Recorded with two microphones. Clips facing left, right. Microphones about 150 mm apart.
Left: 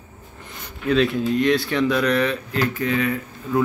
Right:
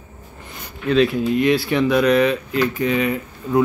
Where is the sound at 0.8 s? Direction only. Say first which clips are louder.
Right 2 dB; 5° right (ahead or behind).